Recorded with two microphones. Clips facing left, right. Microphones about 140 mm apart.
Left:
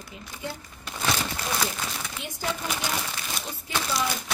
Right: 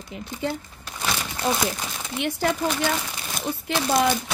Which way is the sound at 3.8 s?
65° right (ahead or behind).